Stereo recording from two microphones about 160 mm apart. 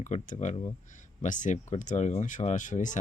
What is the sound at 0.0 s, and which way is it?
Speech, 50° left (ahead or behind).